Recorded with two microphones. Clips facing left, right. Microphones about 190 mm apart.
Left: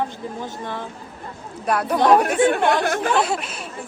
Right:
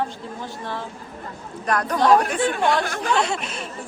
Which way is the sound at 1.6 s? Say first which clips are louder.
Left 2 dB; 5° left (ahead or behind).